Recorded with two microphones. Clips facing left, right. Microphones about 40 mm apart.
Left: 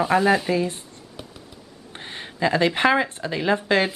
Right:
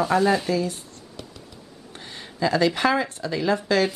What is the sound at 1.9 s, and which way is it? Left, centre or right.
Speech, left.